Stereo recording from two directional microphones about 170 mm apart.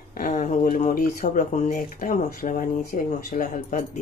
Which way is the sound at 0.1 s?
45° left (ahead or behind).